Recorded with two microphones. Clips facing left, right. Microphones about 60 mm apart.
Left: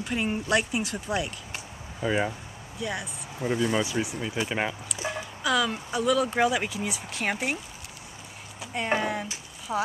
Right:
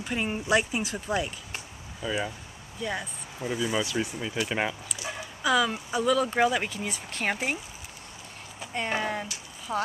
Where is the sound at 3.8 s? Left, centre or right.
Centre.